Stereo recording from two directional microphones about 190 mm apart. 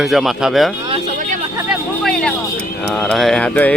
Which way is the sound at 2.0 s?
5° left (ahead or behind).